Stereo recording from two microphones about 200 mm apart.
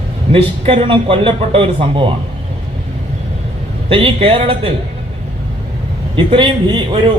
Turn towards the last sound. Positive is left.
turn(degrees=-25)  # may be behind; listen again after turning